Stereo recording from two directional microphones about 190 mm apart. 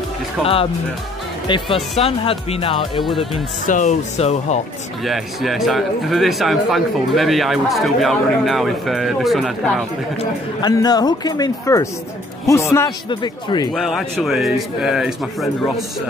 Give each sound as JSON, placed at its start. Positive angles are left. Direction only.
{"t": 0.4, "sound": "a man's voice", "side_deg": 0}
{"t": 1.5, "sound": "speech", "side_deg": 30}
{"t": 3.6, "sound": "speech", "side_deg": 40}
{"t": 5.0, "sound": "a man's voice", "side_deg": 0}
{"t": 10.1, "sound": "speech", "side_deg": 20}
{"t": 13.7, "sound": "a man's voice", "side_deg": 0}